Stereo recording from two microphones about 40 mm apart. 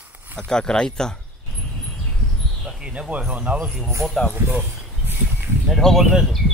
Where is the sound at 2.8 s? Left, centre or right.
Right.